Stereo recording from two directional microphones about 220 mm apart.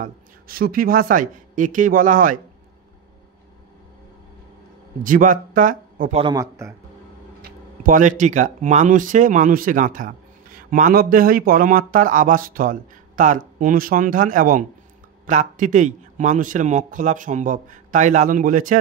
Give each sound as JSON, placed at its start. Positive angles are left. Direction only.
{"t": 0.0, "sound": "speech", "side_deg": -40}
{"t": 5.0, "sound": "speech", "side_deg": -35}
{"t": 6.2, "sound": "a man's voice", "side_deg": -15}
{"t": 7.8, "sound": "speech", "side_deg": -35}